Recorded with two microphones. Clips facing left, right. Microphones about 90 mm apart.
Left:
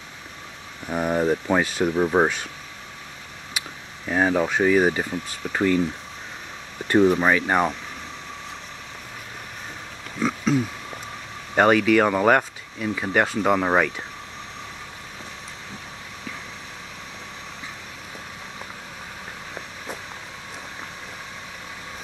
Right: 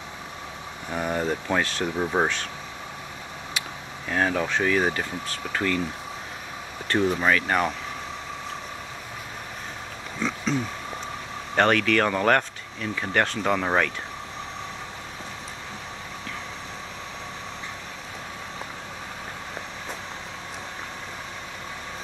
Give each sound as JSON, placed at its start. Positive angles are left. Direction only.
{"t": 0.8, "sound": "speech", "side_deg": 10}
{"t": 4.1, "sound": "speech", "side_deg": 15}
{"t": 6.9, "sound": "speech", "side_deg": 15}
{"t": 10.2, "sound": "a sound", "side_deg": 5}
{"t": 11.5, "sound": "speech", "side_deg": 10}